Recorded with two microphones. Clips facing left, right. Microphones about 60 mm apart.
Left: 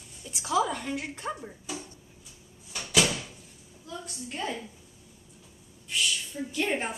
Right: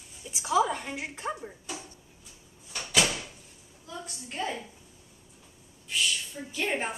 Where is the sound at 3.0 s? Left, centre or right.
Centre.